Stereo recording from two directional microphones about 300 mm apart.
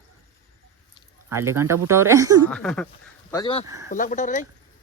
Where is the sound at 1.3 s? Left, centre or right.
Centre.